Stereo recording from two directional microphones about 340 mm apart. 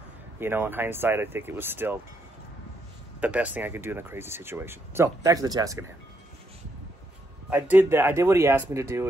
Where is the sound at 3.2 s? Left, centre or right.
Centre.